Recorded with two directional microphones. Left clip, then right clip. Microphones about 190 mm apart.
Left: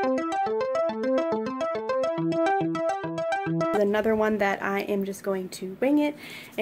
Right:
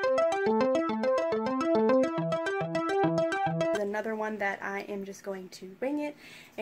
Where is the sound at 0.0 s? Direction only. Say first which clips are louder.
Even; centre (ahead or behind).